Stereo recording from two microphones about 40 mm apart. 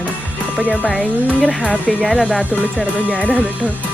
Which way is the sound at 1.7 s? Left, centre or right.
Left.